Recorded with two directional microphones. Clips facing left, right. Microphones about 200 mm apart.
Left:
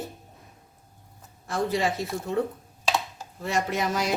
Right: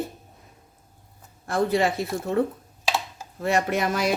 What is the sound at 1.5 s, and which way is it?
Speech, 55° right (ahead or behind).